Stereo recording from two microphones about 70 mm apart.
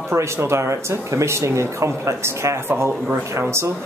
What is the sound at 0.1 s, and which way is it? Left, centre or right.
Speech, right.